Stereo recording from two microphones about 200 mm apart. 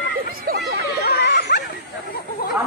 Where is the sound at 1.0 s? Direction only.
55° left (ahead or behind).